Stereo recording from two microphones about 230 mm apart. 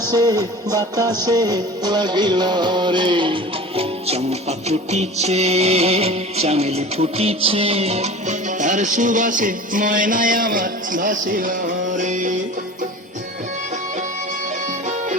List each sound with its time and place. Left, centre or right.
0.1 s music: centre; by 12.3 s right